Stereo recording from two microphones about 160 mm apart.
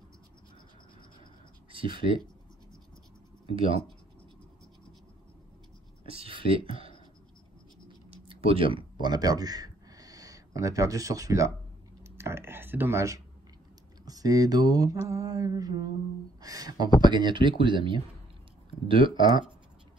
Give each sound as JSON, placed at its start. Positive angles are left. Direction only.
{"t": 1.7, "sound": "speech", "side_deg": -35}
{"t": 3.5, "sound": "speech", "side_deg": -35}
{"t": 6.0, "sound": "speech", "side_deg": -35}
{"t": 8.1, "sound": "tick-tock", "side_deg": -35}
{"t": 9.0, "sound": "speech", "side_deg": -25}
{"t": 12.0, "sound": "a sound", "side_deg": -15}
{"t": 14.0, "sound": "mantra", "side_deg": -25}
{"t": 18.9, "sound": "speech", "side_deg": -30}